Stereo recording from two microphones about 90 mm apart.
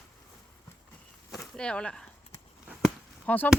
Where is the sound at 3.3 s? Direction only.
15° left (ahead or behind).